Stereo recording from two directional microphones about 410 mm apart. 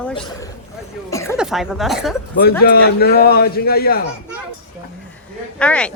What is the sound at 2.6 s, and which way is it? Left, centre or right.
A man's voice, left.